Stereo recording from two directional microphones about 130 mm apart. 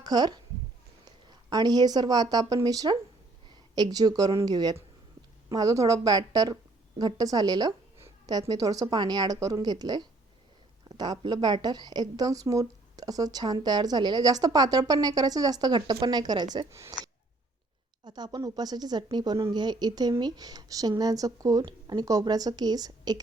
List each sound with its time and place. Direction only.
0.0 s a woman's voice: 30° right (ahead or behind)